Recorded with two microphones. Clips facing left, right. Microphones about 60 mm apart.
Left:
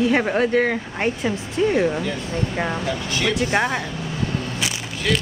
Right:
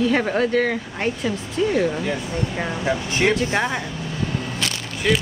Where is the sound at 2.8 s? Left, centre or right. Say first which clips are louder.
Right 3 dB; right.